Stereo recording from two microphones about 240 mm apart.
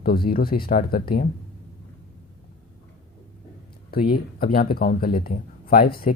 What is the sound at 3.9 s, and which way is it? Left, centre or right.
Speech, left.